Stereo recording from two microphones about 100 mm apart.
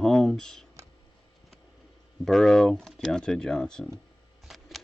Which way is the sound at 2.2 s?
5° left (ahead or behind).